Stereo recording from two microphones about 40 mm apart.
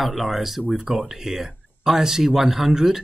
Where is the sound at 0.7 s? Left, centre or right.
Centre.